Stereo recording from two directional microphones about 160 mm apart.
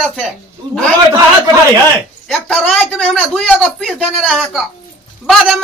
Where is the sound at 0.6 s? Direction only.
25° right (ahead or behind).